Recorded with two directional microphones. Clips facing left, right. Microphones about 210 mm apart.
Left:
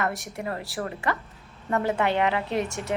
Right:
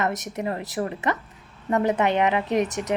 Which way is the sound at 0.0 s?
20° right (ahead or behind).